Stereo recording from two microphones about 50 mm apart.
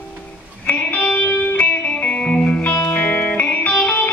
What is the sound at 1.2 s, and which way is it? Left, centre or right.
Music, left.